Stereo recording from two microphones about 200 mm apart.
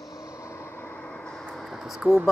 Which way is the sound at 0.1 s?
15° left (ahead or behind).